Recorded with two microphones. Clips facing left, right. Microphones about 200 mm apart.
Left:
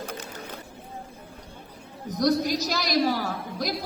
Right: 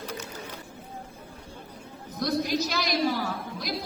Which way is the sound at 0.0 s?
50° left (ahead or behind).